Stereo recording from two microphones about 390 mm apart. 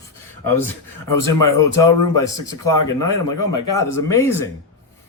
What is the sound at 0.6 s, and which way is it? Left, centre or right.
Speech, centre.